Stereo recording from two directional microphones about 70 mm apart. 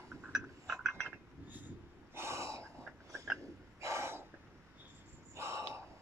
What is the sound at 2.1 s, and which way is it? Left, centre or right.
Gasp, right.